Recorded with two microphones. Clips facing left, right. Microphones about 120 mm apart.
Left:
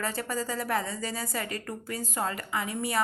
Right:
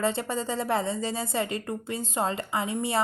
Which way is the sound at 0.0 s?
25° right (ahead or behind).